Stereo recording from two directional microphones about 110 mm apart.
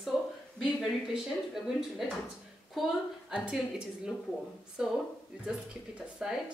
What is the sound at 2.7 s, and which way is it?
A woman's voice, 5° right (ahead or behind).